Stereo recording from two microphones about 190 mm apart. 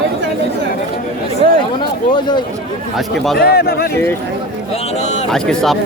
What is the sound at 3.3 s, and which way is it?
Speech, 55° left (ahead or behind).